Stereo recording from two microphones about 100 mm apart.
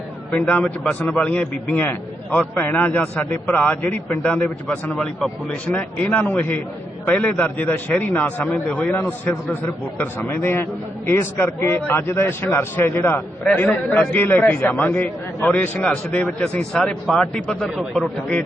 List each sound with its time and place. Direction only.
0.3 s a man's voice: 15° left (ahead or behind)